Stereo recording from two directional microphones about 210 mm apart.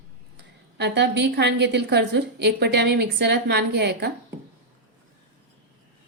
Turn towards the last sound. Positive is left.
turn(degrees=-55)  # may be behind; listen again after turning